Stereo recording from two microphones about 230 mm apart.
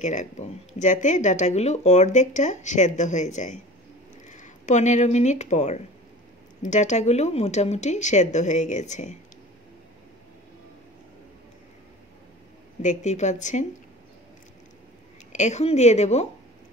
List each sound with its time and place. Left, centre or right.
0.0 s speech: left
12.8 s speech: left
15.3 s a woman's voice: left